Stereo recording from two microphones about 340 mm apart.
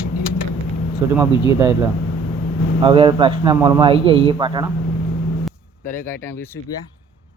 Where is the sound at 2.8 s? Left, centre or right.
Centre.